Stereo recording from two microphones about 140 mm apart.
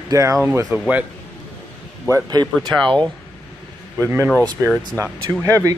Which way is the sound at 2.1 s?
30° right (ahead or behind).